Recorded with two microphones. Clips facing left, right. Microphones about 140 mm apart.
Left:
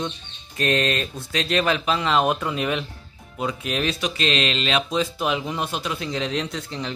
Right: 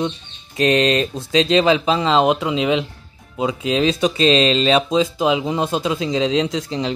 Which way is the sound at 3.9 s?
30° right (ahead or behind).